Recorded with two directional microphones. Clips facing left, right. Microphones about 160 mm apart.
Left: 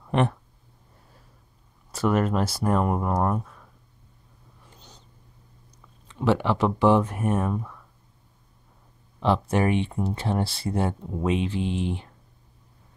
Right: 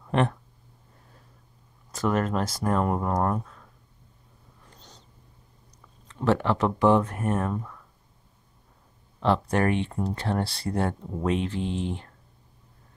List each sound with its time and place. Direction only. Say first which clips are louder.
2.0 s speech: left 2 dB; 10° left (ahead or behind)
4.7 s a sound: even; 5° left (ahead or behind)
6.1 s speech: left 1 dB; 10° left (ahead or behind)
9.2 s speech: left 1 dB; 5° left (ahead or behind)